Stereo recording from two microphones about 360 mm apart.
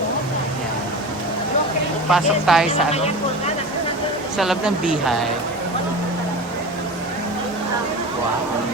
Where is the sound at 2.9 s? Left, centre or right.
Centre.